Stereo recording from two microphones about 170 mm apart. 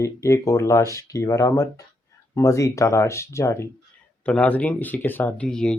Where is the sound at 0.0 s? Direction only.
15° left (ahead or behind).